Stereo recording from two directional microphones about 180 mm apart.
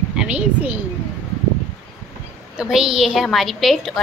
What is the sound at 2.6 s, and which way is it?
A woman's voice, 5° right (ahead or behind).